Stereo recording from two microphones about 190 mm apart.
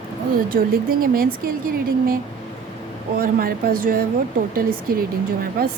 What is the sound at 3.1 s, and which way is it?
A woman's voice, 50° right (ahead or behind).